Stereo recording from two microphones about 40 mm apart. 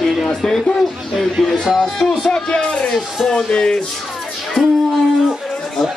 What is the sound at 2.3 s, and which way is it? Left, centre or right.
Speech, left.